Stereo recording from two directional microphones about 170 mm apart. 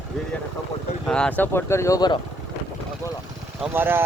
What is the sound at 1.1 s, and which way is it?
Speech, 5° left (ahead or behind).